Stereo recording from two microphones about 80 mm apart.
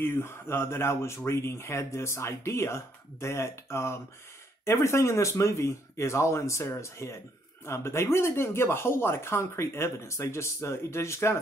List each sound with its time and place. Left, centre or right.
0.0 s speech: left